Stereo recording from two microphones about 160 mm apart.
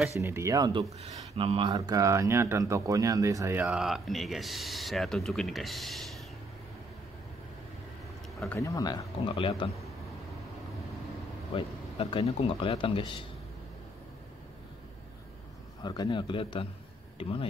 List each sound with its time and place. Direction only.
0.2 s speech: 20° right (ahead or behind)
1.0 s speech: 35° right (ahead or behind)
1.8 s speech: 20° right (ahead or behind)
3.6 s speech: 5° right (ahead or behind)
8.5 s speech: 20° left (ahead or behind)
11.5 s speech: 35° left (ahead or behind)
15.8 s speech: 25° left (ahead or behind)